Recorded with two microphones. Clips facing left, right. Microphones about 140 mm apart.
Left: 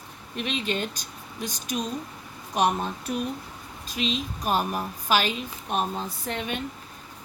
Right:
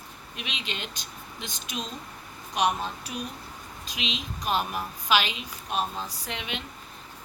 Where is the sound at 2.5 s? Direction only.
50° left (ahead or behind).